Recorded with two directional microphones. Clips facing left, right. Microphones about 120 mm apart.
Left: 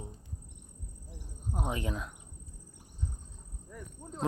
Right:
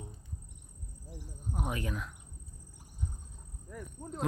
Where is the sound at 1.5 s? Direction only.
20° left (ahead or behind).